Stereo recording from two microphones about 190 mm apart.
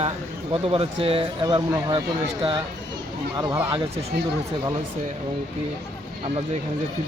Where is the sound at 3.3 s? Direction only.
15° right (ahead or behind).